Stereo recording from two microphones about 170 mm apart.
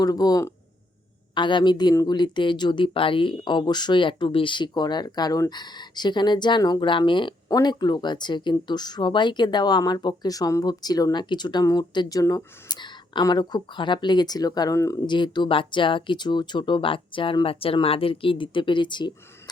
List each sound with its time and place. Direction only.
0.0 s speech: 20° left (ahead or behind)